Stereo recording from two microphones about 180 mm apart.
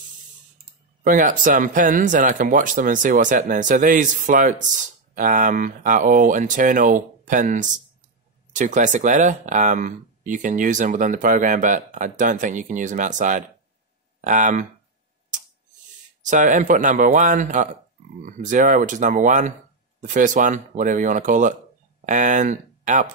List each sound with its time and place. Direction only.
1.0 s speech: 50° right (ahead or behind)
16.3 s speech: 45° right (ahead or behind)